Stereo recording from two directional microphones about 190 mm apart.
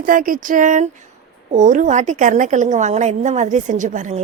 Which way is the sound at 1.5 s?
40° right (ahead or behind).